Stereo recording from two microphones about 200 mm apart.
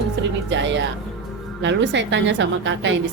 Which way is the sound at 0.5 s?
65° right (ahead or behind).